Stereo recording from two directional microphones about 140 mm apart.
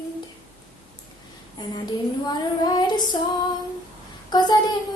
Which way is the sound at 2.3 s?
30° left (ahead or behind).